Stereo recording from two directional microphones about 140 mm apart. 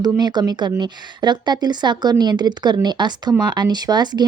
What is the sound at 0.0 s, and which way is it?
Speech, 30° right (ahead or behind).